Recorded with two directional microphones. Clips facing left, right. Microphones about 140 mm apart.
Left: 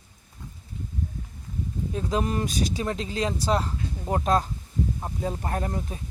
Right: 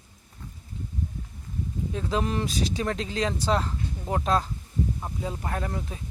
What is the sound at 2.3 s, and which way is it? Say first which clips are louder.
Speech: left 1 dB; 40° left (ahead or behind).